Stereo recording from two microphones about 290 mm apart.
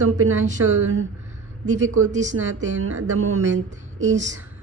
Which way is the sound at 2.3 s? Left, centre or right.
Right.